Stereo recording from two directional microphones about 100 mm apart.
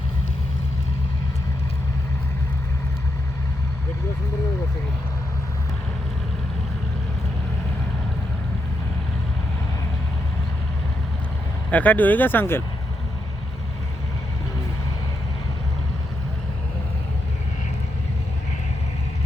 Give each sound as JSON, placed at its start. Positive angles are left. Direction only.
{"t": 11.7, "sound": "speech", "side_deg": 15}